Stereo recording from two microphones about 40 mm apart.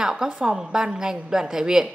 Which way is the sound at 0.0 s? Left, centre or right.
Centre.